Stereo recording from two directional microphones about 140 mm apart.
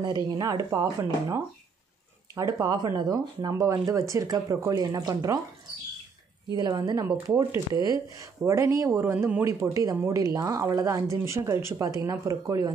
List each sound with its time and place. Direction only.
0.0 s speech: 30° right (ahead or behind)
6.5 s speech: 30° right (ahead or behind)